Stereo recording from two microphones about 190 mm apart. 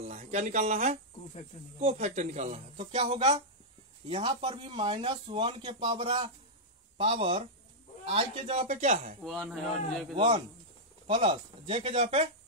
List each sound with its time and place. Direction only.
0.0 s speech: 35° right (ahead or behind)
9.2 s a man's voice: centre (ahead or behind)
10.1 s speech: 25° right (ahead or behind)